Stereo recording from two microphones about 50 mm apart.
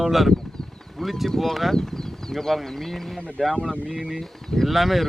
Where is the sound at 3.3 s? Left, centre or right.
Centre.